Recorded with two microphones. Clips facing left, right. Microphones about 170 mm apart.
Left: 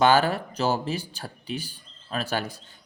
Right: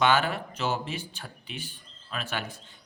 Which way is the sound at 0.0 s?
35° left (ahead or behind).